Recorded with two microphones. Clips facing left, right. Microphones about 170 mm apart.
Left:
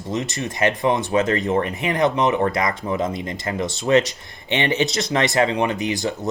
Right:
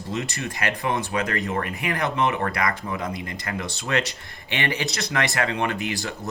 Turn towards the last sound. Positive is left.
turn(degrees=20)  # may be behind; listen again after turning